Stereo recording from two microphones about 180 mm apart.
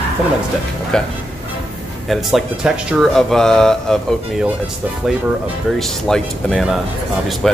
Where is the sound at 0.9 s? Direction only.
5° left (ahead or behind).